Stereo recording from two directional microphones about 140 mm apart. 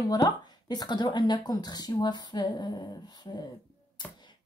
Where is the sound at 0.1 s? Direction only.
30° left (ahead or behind).